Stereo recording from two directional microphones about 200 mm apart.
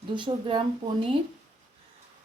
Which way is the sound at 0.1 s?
25° right (ahead or behind).